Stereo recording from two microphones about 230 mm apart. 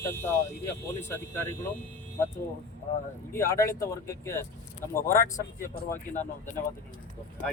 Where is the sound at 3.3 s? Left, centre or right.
Centre.